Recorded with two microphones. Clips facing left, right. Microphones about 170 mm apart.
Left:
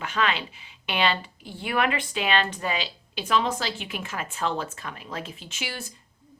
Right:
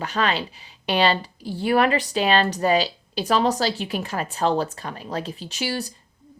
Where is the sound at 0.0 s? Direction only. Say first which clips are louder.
Right 3 dB; 35° right (ahead or behind).